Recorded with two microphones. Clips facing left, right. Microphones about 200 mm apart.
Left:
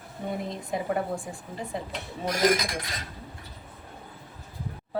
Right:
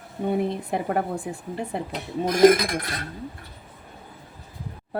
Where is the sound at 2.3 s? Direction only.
55° right (ahead or behind).